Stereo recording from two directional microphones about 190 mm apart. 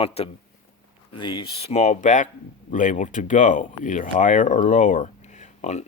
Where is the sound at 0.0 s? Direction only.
30° left (ahead or behind).